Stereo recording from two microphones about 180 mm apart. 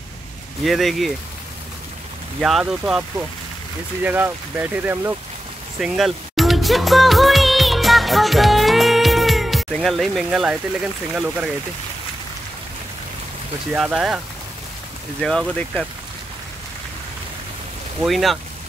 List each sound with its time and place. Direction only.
0.7 s speech: centre (ahead or behind)
2.4 s speech: 5° right (ahead or behind)
5.8 s music: centre (ahead or behind)
11.1 s speech: 5° right (ahead or behind)
13.7 s speech: 5° right (ahead or behind)
15.2 s speech: 5° left (ahead or behind)
18.0 s speech: centre (ahead or behind)